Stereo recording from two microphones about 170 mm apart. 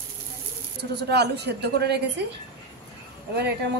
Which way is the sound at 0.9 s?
75° right (ahead or behind).